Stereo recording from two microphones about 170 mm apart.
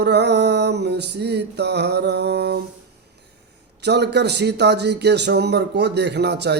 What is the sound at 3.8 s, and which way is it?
Speech, 80° right.